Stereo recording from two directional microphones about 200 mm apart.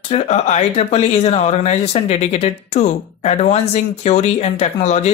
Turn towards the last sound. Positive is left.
turn(degrees=35)  # may be behind; listen again after turning